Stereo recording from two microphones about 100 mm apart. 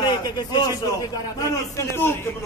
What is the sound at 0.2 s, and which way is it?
Speech, 45° left (ahead or behind).